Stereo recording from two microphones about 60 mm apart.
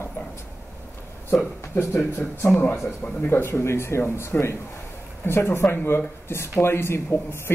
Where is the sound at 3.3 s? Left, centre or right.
Left.